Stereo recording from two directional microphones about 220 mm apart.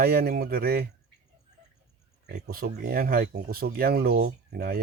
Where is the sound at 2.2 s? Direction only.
45° right (ahead or behind).